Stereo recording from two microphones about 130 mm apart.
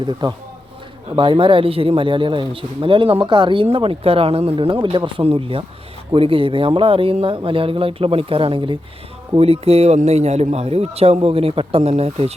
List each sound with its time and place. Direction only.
0.0 s speech: 35° right (ahead or behind); by 12.3 s 50° right (ahead or behind)